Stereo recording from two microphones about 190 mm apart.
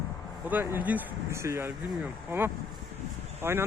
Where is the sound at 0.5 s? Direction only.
10° right (ahead or behind).